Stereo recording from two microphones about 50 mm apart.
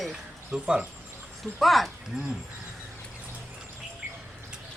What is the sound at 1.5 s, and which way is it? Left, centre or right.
Speech, centre.